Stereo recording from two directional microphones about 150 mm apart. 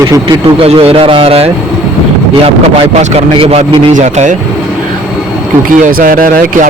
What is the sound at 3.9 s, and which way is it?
Speech, 55° right (ahead or behind).